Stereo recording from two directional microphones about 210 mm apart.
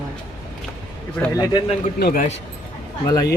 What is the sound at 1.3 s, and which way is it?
Speech, 15° left (ahead or behind).